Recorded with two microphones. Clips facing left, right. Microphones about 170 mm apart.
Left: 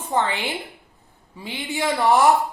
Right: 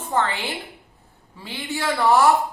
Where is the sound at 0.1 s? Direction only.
15° left (ahead or behind).